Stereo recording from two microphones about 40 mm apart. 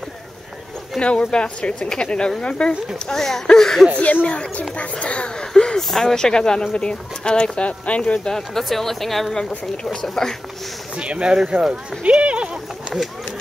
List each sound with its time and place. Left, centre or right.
1.0 s speech: left
3.1 s speech: centre
4.0 s speech: left
5.4 s a sound: centre
5.8 s speech: centre; by 8.3 s left
8.3 s speech: centre
10.2 s speech: centre
11.0 s speech: right
12.0 s a sound: right